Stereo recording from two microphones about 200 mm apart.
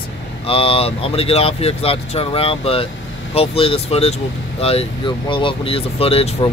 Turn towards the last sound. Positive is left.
turn(degrees=30)  # may be behind; listen again after turning